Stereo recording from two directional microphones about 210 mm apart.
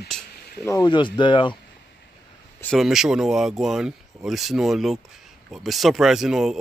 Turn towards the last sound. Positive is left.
turn(degrees=0)  # may be behind; listen again after turning